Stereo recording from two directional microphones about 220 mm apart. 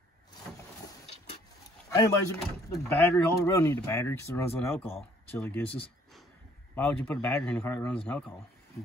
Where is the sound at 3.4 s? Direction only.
15° left (ahead or behind).